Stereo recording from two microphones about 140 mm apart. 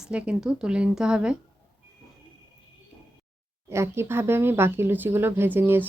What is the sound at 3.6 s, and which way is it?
Speech, 20° right (ahead or behind).